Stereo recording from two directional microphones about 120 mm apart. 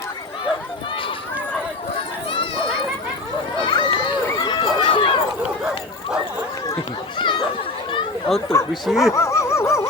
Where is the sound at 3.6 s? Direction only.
40° left (ahead or behind).